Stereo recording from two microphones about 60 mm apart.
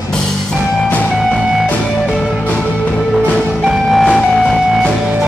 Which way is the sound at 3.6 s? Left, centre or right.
Centre.